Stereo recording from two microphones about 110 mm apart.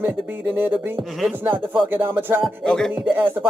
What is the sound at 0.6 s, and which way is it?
Music, 20° right (ahead or behind).